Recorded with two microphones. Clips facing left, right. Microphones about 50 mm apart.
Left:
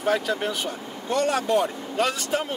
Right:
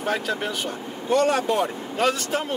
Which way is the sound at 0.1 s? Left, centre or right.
Centre.